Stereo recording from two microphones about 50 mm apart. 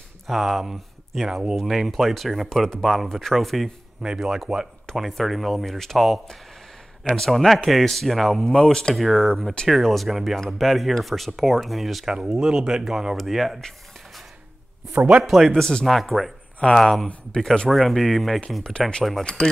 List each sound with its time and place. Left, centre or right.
0.3 s speech: centre
4.0 s speech: centre
8.9 s speech: centre
12.1 s speech: centre
15.2 s speech: centre
17.1 s speech: centre
17.6 s speech: centre
18.6 s speech: centre